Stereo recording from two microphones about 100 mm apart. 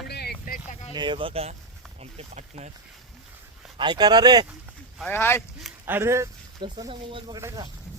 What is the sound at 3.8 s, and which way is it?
Speech, 50° right (ahead or behind).